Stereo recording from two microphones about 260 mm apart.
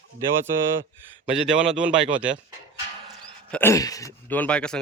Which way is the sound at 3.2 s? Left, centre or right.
Centre.